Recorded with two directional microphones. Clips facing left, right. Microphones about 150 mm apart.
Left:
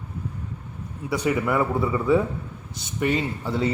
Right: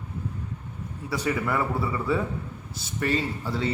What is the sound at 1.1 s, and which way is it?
Speech, 20° left (ahead or behind).